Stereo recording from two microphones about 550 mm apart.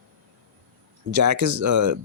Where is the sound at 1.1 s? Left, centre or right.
Right.